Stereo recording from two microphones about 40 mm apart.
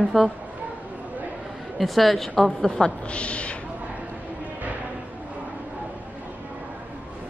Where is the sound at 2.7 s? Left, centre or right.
Left.